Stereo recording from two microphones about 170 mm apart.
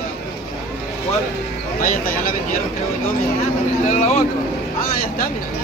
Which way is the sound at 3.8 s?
45° left (ahead or behind).